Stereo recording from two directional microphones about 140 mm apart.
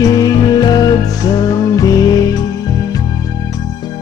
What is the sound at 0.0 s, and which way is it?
Music, 25° left (ahead or behind).